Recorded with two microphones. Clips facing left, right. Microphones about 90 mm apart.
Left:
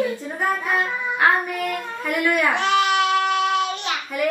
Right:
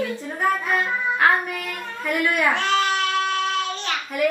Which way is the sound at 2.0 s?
15° left (ahead or behind).